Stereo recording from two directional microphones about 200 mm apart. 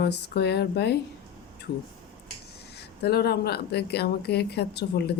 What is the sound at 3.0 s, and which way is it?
A woman's voice, 55° left (ahead or behind).